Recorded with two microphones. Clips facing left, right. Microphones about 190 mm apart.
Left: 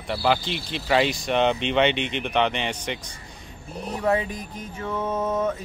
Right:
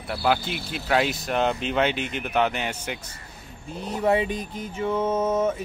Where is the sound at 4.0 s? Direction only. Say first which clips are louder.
Right 2 dB; 20° right (ahead or behind).